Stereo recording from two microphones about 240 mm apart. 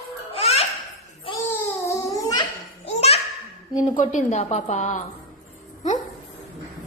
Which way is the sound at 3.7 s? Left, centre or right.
Left.